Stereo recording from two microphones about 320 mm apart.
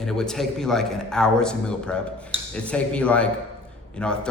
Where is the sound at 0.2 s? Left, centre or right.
Centre.